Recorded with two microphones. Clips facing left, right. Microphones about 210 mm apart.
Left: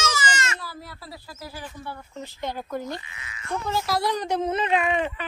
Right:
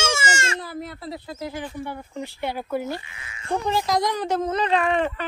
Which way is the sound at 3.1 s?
30° right (ahead or behind).